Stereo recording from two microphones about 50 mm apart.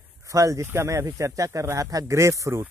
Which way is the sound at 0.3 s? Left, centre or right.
Right.